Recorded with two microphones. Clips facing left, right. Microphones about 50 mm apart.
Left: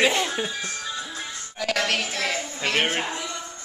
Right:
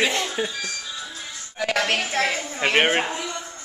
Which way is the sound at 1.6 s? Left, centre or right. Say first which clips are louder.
Right 2 dB; right.